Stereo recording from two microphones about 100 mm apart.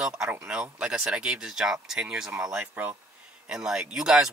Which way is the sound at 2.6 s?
20° right (ahead or behind).